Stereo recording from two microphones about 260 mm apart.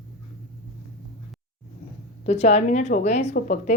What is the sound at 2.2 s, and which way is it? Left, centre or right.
Speech, left.